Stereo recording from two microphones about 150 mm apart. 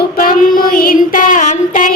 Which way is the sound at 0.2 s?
70° left (ahead or behind).